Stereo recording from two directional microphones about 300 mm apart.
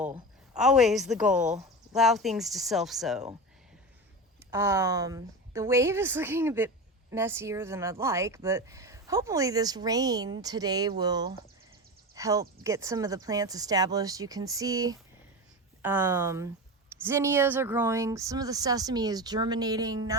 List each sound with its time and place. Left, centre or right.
0.0 s a woman's voice: centre
1.5 s a sound: right
2.0 s speech: centre
4.5 s speech: centre